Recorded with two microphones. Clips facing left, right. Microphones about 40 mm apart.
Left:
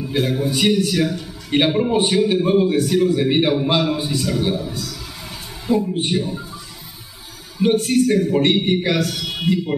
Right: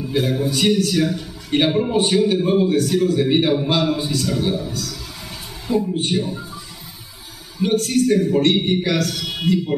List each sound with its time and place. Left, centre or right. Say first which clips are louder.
0.0 s a man's voice: even; centre
7.7 s a man's voice: right 1 dB; centre